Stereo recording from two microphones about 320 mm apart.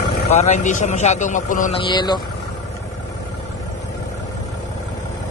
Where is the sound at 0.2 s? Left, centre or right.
Left.